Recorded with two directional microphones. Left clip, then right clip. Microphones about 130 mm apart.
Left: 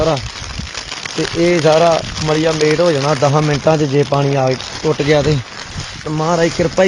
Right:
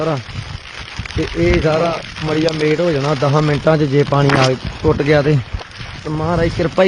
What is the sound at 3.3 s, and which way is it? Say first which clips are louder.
Speech: left 1 dB; 20° right (ahead or behind).